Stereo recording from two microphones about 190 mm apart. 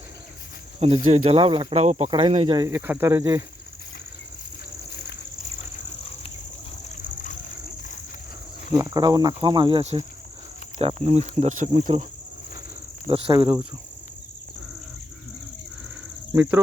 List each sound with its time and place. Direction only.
0.8 s cricket: 30° right (ahead or behind)
2.6 s speech: 10° right (ahead or behind)
4.9 s a sound: 55° left (ahead or behind)
6.8 s a sound: 45° left (ahead or behind)
8.7 s cricket: 20° right (ahead or behind); by 11.9 s 40° right (ahead or behind)
13.1 s cricket: 30° right (ahead or behind)
16.3 s speech: 10° right (ahead or behind)